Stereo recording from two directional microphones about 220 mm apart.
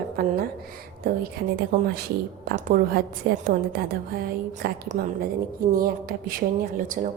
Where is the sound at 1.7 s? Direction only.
45° right (ahead or behind).